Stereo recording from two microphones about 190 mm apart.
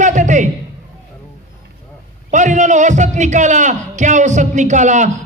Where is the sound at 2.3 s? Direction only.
40° right (ahead or behind).